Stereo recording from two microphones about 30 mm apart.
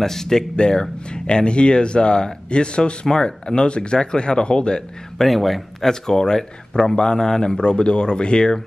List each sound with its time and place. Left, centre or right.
0.0 s speech: centre
0.6 s speech: left
5.2 s a man's voice: centre
5.9 s speech: centre